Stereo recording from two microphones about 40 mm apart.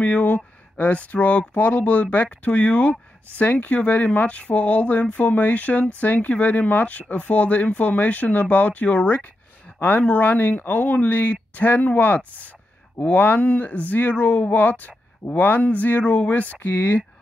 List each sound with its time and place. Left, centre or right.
0.0 s speech: left
9.8 s speech: left
16.5 s speech: left